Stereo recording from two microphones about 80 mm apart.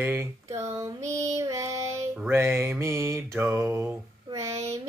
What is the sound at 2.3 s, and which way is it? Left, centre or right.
Mantra, right.